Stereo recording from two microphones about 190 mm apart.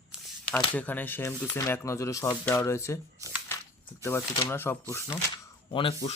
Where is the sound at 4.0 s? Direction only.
15° left (ahead or behind).